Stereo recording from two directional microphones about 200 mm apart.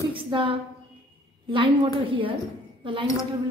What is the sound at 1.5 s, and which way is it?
A woman's voice, 25° right (ahead or behind).